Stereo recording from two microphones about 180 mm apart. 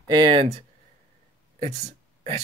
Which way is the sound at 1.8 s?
40° right (ahead or behind).